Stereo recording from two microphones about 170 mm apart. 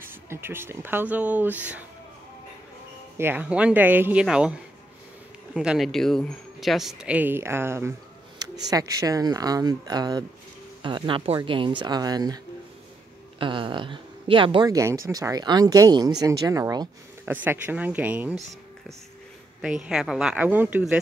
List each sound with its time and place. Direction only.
0.1 s speech: 15° right (ahead or behind)
3.2 s speech: 10° right (ahead or behind)
13.4 s speech: 30° right (ahead or behind)
17.2 s speech: 10° right (ahead or behind)
19.6 s speech: 5° right (ahead or behind)